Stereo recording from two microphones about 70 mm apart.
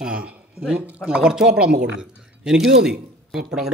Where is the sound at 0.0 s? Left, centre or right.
Centre.